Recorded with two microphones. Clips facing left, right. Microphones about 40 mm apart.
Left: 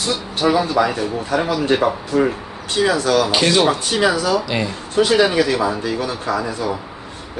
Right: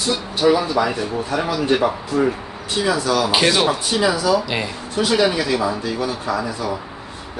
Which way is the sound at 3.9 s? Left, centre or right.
Left.